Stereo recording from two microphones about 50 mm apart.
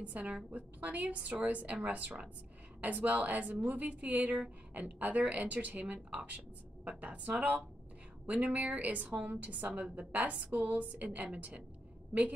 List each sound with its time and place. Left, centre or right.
0.0 s a woman's voice: right